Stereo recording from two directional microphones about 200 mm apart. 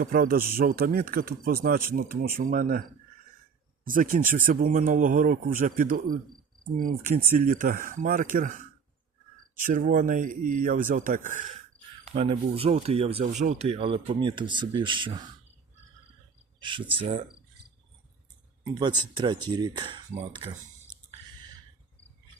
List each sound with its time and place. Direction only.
0.0 s speech: 45° right (ahead or behind)
3.8 s speech: 45° right (ahead or behind)
9.6 s speech: 40° right (ahead or behind)
12.1 s speech: 30° right (ahead or behind)
16.6 s speech: 25° right (ahead or behind)
18.7 s speech: 20° right (ahead or behind)